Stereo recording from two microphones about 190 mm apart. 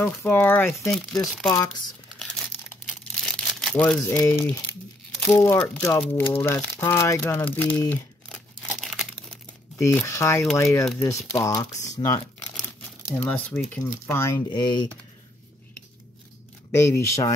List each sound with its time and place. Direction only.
0.0 s speech: 10° left (ahead or behind)
1.5 s speech: 20° left (ahead or behind)
3.0 s crumpling: 5° left (ahead or behind)
4.3 s speech: 10° left (ahead or behind)
8.6 s crumpling: centre (ahead or behind)
10.0 s speech: 15° left (ahead or behind)
13.2 s speech: 10° left (ahead or behind)
16.7 s speech: 15° left (ahead or behind)